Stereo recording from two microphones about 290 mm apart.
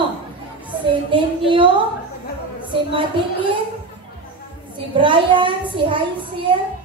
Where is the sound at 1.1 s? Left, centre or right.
Centre.